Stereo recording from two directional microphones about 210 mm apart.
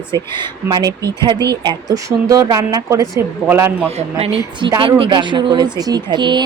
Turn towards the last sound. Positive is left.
turn(degrees=-20)  # may be behind; listen again after turning